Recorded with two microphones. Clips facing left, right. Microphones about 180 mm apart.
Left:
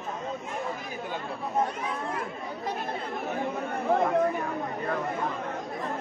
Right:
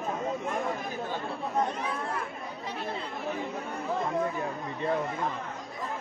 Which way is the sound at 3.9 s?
60° left (ahead or behind).